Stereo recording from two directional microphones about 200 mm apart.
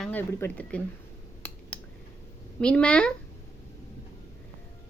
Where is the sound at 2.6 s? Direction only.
5° left (ahead or behind).